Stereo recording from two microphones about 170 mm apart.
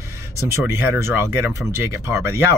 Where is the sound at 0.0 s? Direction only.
15° right (ahead or behind).